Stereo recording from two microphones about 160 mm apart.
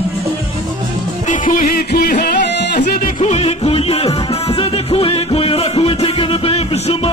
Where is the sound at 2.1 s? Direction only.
55° left (ahead or behind).